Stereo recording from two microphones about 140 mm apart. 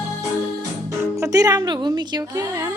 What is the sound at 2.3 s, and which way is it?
Speech, 20° right (ahead or behind).